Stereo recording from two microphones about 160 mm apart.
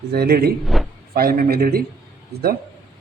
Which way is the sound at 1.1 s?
65° right (ahead or behind).